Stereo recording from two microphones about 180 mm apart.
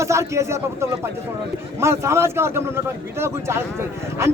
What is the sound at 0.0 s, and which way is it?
A man's voice, 15° right (ahead or behind).